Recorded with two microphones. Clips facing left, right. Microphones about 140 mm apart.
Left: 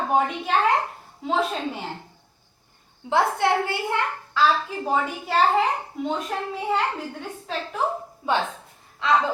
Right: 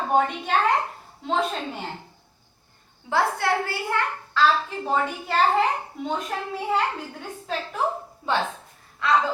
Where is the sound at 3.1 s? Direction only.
20° left (ahead or behind).